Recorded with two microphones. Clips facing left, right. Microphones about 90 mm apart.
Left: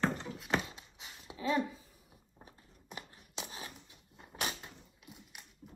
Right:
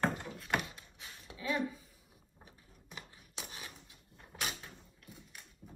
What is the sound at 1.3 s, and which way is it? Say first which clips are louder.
Speech: left 3 dB; 30° left (ahead or behind).